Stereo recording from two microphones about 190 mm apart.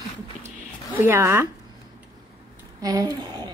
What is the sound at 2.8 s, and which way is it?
Speech, 20° right (ahead or behind).